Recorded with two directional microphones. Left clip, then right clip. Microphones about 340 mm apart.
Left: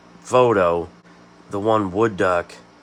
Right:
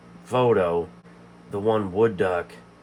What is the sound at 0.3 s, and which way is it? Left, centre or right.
Speech, left.